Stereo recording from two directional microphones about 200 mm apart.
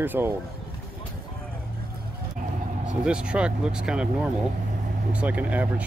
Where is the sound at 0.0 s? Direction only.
10° right (ahead or behind).